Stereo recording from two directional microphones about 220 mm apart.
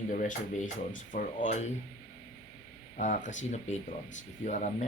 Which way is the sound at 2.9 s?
35° left (ahead or behind).